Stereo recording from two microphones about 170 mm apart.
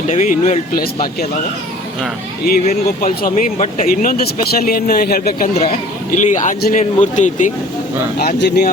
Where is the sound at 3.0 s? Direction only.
55° left (ahead or behind).